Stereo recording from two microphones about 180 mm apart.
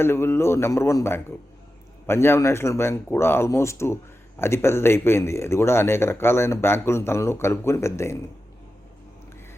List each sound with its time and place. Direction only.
0.0 s speech: 15° left (ahead or behind)